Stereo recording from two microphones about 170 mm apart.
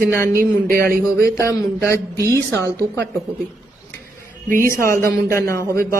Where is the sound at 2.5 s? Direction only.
15° left (ahead or behind).